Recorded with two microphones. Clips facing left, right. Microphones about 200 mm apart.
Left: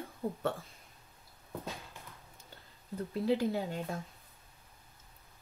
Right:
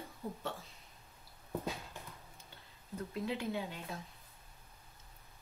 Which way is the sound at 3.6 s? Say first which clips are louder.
Left 5 dB; 50° left (ahead or behind).